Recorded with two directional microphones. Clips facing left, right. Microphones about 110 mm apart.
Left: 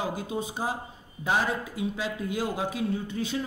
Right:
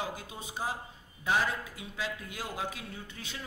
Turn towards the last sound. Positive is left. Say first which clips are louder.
# left 14 dB
turn(degrees=20)  # may be behind; listen again after turning